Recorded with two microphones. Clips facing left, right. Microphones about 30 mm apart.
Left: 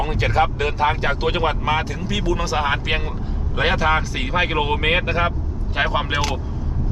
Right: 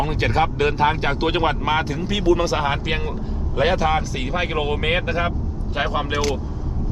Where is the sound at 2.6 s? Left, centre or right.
Centre.